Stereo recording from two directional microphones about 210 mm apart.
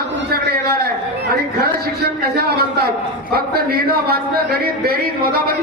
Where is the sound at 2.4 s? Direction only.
50° right (ahead or behind).